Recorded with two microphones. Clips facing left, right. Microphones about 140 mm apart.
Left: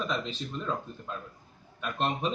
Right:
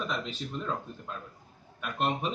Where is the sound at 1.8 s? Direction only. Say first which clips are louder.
Even; 5° right (ahead or behind).